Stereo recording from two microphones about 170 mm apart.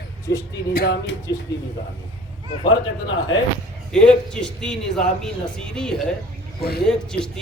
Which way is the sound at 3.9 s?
5° left (ahead or behind).